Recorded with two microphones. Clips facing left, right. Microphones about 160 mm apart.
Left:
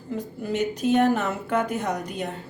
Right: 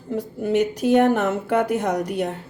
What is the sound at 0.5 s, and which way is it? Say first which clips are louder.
A woman's voice: right 4 dB; 70° right (ahead or behind).